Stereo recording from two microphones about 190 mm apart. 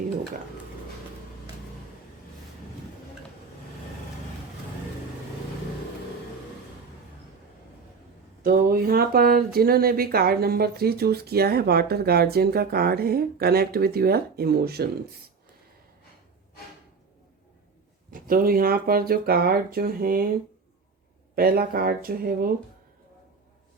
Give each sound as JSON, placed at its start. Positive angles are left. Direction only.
{"t": 8.4, "sound": "speech", "side_deg": -50}
{"t": 18.1, "sound": "speech", "side_deg": -50}
{"t": 21.3, "sound": "speech", "side_deg": -50}